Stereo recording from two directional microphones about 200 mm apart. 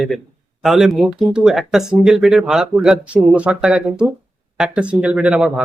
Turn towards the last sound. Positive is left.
turn(degrees=-5)  # may be behind; listen again after turning